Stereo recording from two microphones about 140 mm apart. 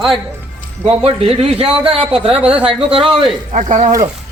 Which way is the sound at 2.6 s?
40° right (ahead or behind).